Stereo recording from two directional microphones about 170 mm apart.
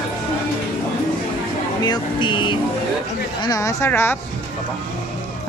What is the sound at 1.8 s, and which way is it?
Vehicle, 25° left (ahead or behind).